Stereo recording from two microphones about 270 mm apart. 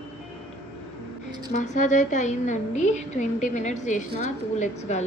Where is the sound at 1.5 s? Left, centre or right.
Left.